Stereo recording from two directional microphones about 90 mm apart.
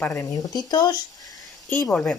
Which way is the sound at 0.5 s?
50° left (ahead or behind).